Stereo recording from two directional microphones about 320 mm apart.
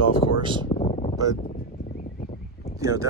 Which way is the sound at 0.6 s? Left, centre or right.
Centre.